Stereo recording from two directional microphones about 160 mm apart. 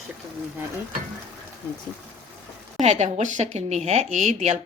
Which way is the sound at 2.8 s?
45° right (ahead or behind).